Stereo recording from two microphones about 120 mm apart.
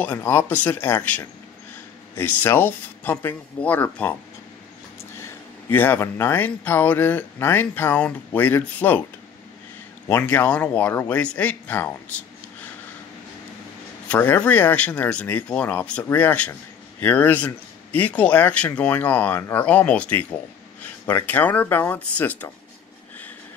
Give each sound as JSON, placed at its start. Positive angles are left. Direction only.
{"t": 0.0, "sound": "speech", "side_deg": 20}
{"t": 5.2, "sound": "speech", "side_deg": 15}
{"t": 10.0, "sound": "speech", "side_deg": 15}
{"t": 14.0, "sound": "speech", "side_deg": 15}